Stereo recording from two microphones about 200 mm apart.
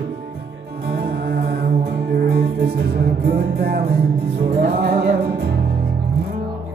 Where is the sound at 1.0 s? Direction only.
50° right (ahead or behind).